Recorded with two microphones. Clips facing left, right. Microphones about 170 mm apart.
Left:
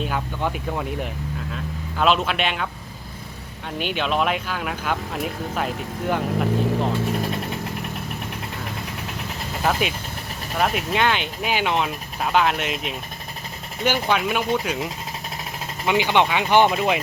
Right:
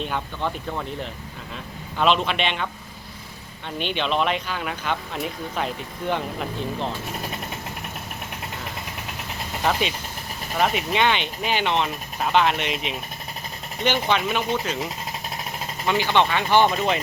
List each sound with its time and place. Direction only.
0.0 s speech: 5° left (ahead or behind)
2.0 s speech: 5° left (ahead or behind)
3.8 s speech: 5° left (ahead or behind)
10.6 s speech: centre (ahead or behind)
15.9 s speech: 15° left (ahead or behind)